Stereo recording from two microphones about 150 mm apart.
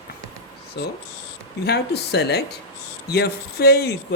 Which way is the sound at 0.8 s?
90° left.